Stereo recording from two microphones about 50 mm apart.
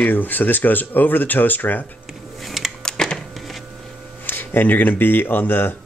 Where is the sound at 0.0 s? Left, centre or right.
Left.